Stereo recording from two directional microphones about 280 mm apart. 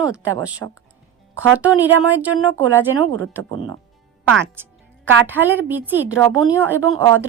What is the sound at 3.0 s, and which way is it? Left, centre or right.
Speech, right.